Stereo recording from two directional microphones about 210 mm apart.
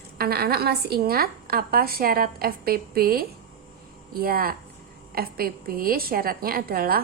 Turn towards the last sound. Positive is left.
turn(degrees=-45)  # may be behind; listen again after turning